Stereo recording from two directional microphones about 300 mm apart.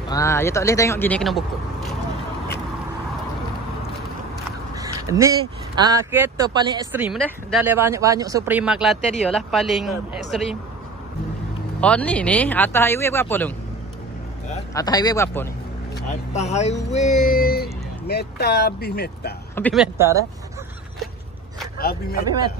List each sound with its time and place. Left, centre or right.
0.1 s speech: centre
4.7 s crow: centre
5.8 s speech: centre
11.8 s speech: centre
14.7 s speech: centre
16.1 s speech: left
19.5 s speech: centre
21.7 s speech: left